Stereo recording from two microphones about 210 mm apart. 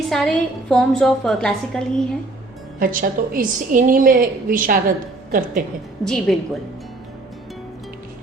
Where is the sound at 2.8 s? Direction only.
40° right (ahead or behind).